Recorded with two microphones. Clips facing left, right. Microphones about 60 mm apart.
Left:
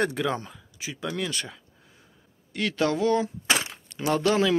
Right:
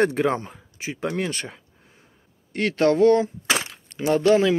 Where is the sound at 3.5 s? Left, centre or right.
Right.